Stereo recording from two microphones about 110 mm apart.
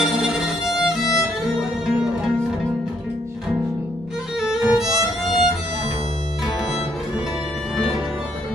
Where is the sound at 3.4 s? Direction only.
5° right (ahead or behind).